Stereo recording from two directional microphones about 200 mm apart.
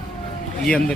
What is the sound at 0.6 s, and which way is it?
Speech, 5° left (ahead or behind).